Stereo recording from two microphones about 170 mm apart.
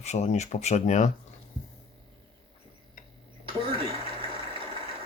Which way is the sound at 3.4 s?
30° right (ahead or behind).